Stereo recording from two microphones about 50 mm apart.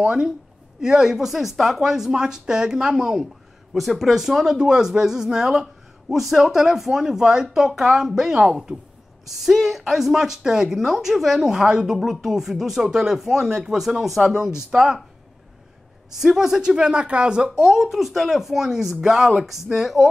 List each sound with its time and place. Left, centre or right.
0.0 s speech: centre
3.7 s speech: centre
16.1 s speech: centre